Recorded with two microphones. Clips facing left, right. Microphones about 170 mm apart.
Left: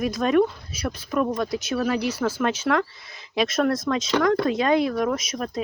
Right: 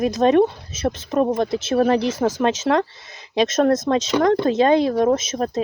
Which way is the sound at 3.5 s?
45° right (ahead or behind).